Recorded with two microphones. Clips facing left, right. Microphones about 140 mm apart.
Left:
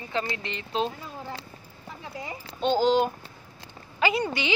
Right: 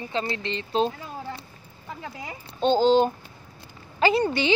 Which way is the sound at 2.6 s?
30° right (ahead or behind).